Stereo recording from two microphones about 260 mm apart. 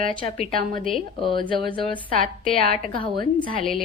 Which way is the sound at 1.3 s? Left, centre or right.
Centre.